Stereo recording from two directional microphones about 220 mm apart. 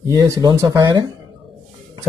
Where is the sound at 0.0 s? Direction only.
15° right (ahead or behind).